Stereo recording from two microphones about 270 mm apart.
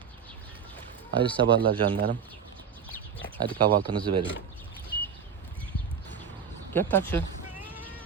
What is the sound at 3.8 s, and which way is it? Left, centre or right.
Speech, centre.